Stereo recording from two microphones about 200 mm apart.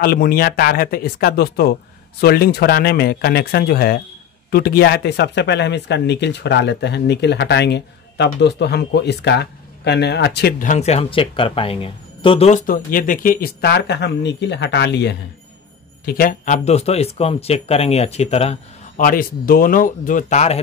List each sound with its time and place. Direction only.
0.0 s speech: 50° left (ahead or behind)
16.1 s speech: 45° left (ahead or behind)
18.9 s speech: 45° left (ahead or behind)